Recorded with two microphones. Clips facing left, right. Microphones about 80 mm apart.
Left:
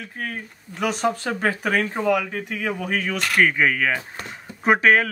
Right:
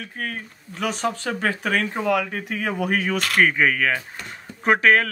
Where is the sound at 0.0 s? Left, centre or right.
Centre.